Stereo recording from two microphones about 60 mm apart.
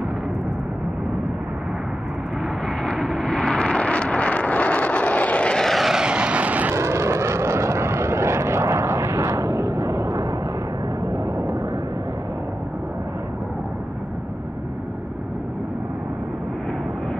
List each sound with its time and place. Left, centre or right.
2.8 s vehicle: centre; by 5.6 s left
5.6 s vehicle: centre
5.9 s vehicle: centre
6.7 s vehicle: right